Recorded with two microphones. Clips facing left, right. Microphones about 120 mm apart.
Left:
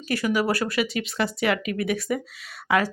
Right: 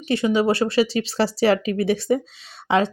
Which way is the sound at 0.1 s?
25° right (ahead or behind).